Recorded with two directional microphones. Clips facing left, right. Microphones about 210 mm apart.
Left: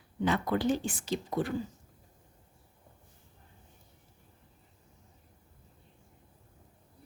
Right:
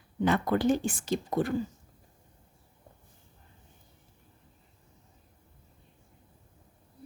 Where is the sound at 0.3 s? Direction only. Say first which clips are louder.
Right 3 dB; 50° right (ahead or behind).